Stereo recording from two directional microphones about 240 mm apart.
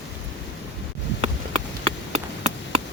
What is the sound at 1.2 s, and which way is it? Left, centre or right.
Chop, right.